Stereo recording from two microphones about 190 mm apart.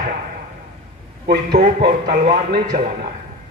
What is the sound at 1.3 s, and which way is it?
A man's voice, 50° right (ahead or behind).